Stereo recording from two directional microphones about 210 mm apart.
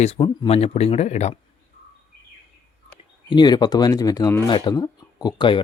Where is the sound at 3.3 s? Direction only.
20° left (ahead or behind).